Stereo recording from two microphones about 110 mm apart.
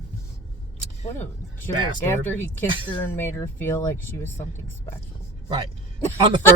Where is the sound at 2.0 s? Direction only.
20° left (ahead or behind).